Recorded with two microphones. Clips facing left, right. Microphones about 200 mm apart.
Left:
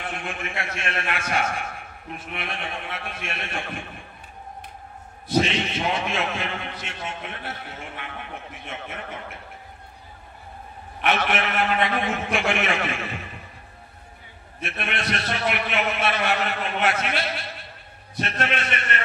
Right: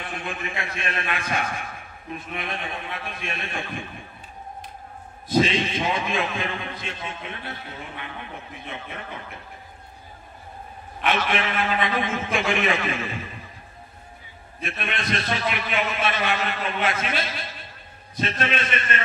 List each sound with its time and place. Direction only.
0.0 s a sound: 50° left (ahead or behind)
0.6 s a man's voice: 75° left (ahead or behind)
5.4 s a man's voice: 65° left (ahead or behind)
11.0 s a man's voice: 60° left (ahead or behind)
14.6 s a man's voice: 70° left (ahead or behind)